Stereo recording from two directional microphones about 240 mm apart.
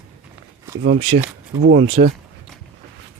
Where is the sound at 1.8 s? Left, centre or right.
Right.